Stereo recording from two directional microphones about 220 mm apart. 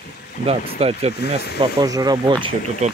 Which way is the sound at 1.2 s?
45° left (ahead or behind).